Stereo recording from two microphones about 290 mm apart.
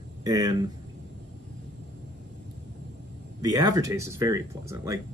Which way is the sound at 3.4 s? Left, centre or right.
Centre.